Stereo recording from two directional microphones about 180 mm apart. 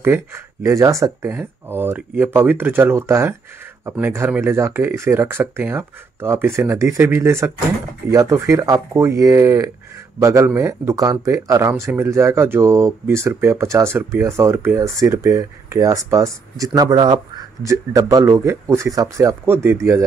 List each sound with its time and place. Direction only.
0.0 s speech: 10° right (ahead or behind)